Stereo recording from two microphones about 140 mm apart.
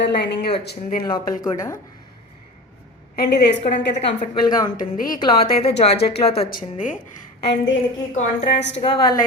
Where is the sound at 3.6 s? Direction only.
55° left (ahead or behind).